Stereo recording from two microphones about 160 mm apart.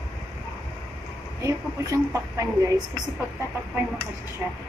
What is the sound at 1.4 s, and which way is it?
A woman's voice, 20° right (ahead or behind).